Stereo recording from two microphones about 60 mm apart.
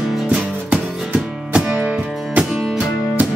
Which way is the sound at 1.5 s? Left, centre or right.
Right.